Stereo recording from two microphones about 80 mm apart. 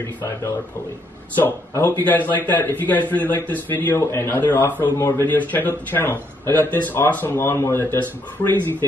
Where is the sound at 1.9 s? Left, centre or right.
Left.